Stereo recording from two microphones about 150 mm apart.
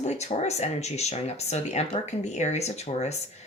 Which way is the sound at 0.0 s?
50° left (ahead or behind).